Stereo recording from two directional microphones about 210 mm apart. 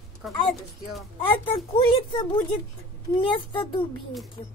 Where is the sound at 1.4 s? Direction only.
25° left (ahead or behind).